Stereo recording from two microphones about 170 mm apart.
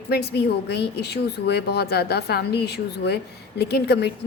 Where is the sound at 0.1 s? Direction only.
70° left (ahead or behind).